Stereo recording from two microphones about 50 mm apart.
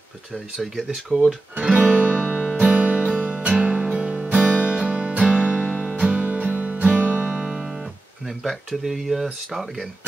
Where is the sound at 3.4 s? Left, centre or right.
Right.